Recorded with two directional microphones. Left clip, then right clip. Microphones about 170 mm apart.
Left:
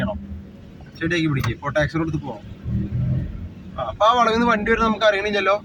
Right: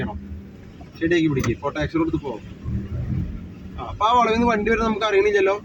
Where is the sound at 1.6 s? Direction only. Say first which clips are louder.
Left 6 dB; 85° left.